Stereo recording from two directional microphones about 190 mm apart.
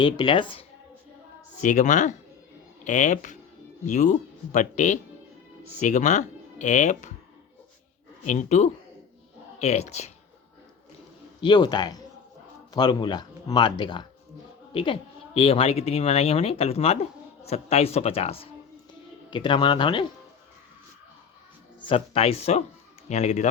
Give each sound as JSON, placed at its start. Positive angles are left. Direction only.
{"t": 0.0, "sound": "speech", "side_deg": 25}
{"t": 1.6, "sound": "speech", "side_deg": 40}
{"t": 8.3, "sound": "speech", "side_deg": 40}
{"t": 11.3, "sound": "speech", "side_deg": 25}
{"t": 21.8, "sound": "speech", "side_deg": 30}